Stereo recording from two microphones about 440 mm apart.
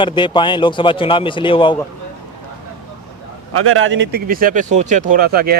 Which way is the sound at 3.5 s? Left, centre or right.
Right.